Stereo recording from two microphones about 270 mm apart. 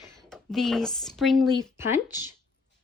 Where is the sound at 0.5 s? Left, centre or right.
Centre.